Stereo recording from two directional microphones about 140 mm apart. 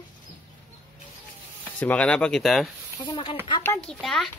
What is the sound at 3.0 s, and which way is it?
Speech, 35° left (ahead or behind).